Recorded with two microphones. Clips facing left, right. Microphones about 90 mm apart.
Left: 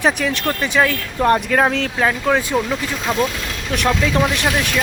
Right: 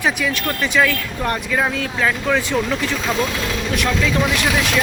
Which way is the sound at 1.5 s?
50° left (ahead or behind).